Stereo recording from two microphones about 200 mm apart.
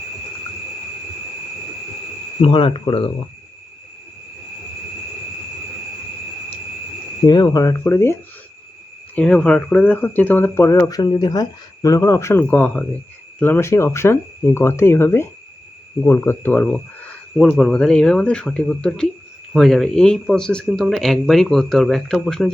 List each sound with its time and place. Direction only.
2.4 s speech: 25° left (ahead or behind)
7.3 s speech: 20° left (ahead or behind)
9.1 s speech: 5° left (ahead or behind)